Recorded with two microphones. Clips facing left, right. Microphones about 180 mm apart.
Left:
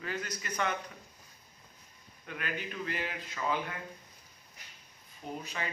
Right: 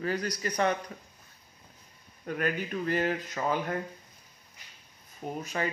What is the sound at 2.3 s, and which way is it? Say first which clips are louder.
Speech: right 8 dB; 45° right (ahead or behind).